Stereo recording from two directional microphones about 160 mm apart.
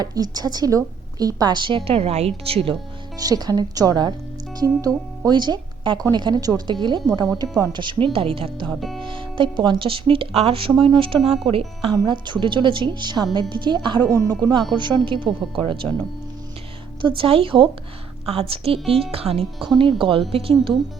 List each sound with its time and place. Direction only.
0.0 s a woman's voice: 25° right (ahead or behind)
3.2 s a woman's voice: 25° right (ahead or behind)
8.7 s speech: centre (ahead or behind)
9.0 s a woman's voice: 30° right (ahead or behind)
17.0 s speech: 30° right (ahead or behind)